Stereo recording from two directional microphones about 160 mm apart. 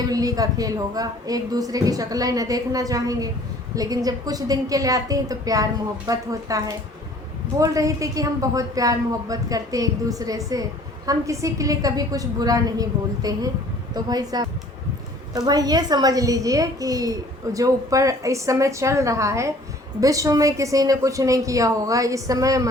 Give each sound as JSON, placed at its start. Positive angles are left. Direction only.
{"t": 0.0, "sound": "speech", "side_deg": -25}